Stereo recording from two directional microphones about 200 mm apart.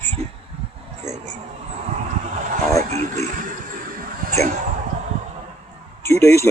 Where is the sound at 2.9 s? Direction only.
35° right (ahead or behind).